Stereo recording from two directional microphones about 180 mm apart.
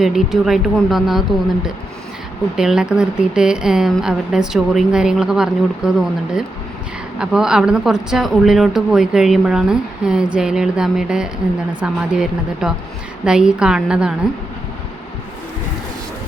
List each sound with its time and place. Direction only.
0.0 s a woman's voice: centre (ahead or behind)
2.6 s a woman's voice: 5° right (ahead or behind)
7.2 s a woman's voice: 5° right (ahead or behind)